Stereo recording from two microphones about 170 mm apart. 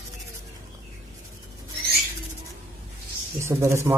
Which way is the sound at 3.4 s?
15° right (ahead or behind).